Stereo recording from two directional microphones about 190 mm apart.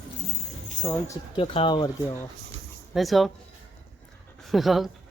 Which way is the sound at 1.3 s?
30° left (ahead or behind).